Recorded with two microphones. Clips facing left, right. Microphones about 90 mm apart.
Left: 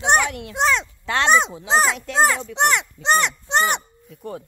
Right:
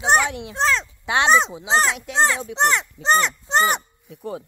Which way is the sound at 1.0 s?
15° right (ahead or behind).